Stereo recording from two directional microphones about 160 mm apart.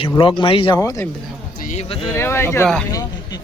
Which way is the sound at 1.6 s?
50° left (ahead or behind).